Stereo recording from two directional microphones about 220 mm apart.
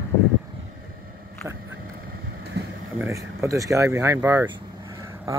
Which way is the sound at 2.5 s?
50° right (ahead or behind).